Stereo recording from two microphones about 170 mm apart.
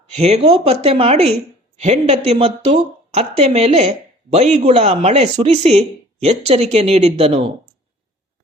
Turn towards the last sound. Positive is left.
turn(degrees=-40)  # may be behind; listen again after turning